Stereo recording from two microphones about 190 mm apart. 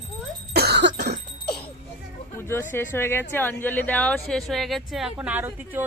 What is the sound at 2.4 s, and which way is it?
A woman's voice, 10° left (ahead or behind).